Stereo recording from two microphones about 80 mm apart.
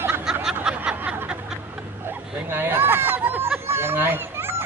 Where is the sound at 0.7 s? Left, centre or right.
Centre.